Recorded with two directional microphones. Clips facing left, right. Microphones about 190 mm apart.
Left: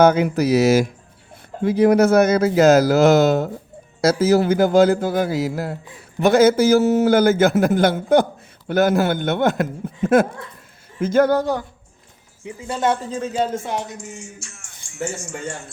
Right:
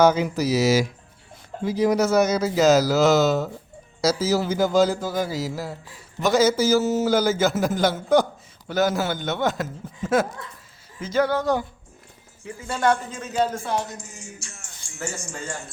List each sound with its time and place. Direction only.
0.0 s a man's voice: 60° left (ahead or behind)
12.5 s speech: 15° left (ahead or behind)
13.1 s speech: 30° left (ahead or behind)
14.3 s music: 35° right (ahead or behind)